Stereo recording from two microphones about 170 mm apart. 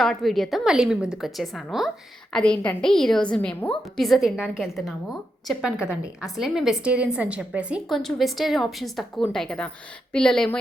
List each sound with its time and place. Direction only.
0.0 s a woman's voice: centre (ahead or behind)